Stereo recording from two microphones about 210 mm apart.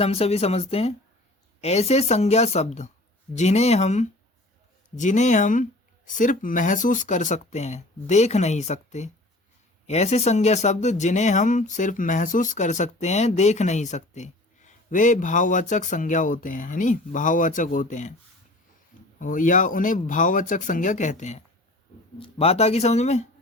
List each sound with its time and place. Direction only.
0.0 s speech: 30° left (ahead or behind)
19.2 s speech: 40° left (ahead or behind)